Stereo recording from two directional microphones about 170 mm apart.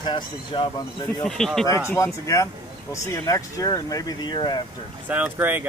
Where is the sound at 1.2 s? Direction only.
5° left (ahead or behind).